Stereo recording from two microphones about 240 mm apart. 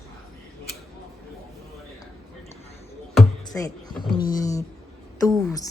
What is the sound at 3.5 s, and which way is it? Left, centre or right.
A woman's voice, centre.